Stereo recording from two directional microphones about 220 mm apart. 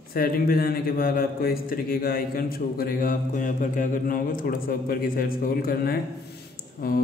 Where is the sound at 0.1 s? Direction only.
40° left (ahead or behind).